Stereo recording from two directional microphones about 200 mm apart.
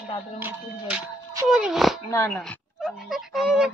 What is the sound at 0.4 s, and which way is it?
Speech, 10° right (ahead or behind).